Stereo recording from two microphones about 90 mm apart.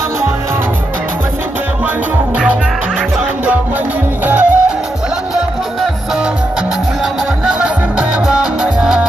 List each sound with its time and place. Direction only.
4.3 s music: 15° right (ahead or behind)
7.5 s music: 10° right (ahead or behind)